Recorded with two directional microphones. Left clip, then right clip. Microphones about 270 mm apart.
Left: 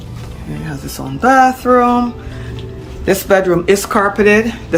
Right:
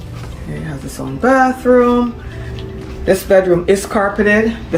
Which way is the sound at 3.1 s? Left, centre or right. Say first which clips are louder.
Right 1 dB; centre.